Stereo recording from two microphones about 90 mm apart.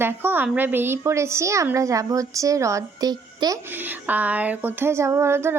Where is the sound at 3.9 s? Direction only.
20° right (ahead or behind).